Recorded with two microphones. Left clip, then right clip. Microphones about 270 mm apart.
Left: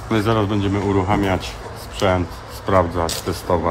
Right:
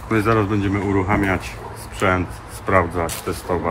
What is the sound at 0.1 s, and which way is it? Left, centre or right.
Speech, centre.